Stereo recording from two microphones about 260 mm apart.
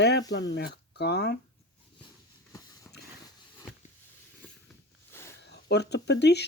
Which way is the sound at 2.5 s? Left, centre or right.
Centre.